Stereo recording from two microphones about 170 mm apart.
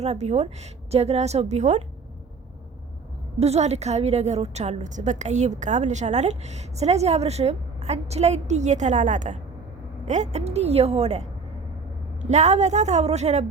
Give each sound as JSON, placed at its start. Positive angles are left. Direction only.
{"t": 0.0, "sound": "a woman's voice", "side_deg": -40}
{"t": 3.4, "sound": "a woman's voice", "side_deg": -40}